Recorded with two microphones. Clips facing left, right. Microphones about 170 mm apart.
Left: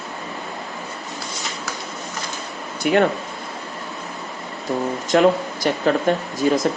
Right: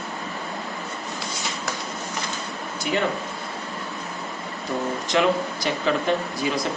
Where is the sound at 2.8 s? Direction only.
60° left (ahead or behind).